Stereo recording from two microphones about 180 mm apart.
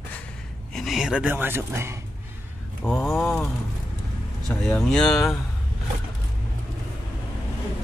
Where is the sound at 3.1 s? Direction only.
10° left (ahead or behind).